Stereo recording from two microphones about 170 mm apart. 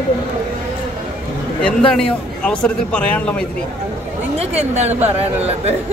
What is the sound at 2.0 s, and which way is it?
Speech, 5° left (ahead or behind).